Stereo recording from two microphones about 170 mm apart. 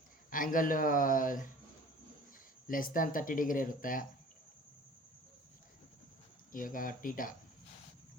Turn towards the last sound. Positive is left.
turn(degrees=55)  # may be behind; listen again after turning